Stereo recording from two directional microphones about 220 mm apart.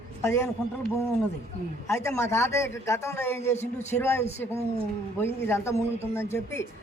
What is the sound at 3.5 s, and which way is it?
Speech, 30° left (ahead or behind).